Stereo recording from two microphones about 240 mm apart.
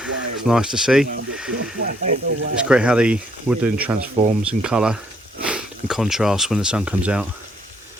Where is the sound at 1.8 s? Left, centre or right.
Right.